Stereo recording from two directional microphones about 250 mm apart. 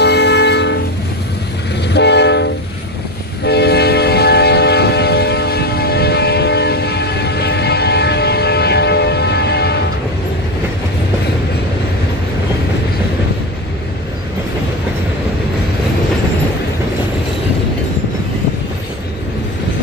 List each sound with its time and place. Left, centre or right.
0.0 s train: left
1.9 s train: left